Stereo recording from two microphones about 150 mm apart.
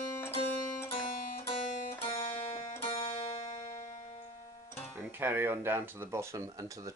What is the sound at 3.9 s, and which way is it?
Music, 55° left (ahead or behind).